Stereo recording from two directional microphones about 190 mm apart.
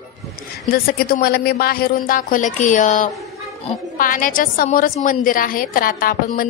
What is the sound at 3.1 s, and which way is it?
Child singing, centre (ahead or behind).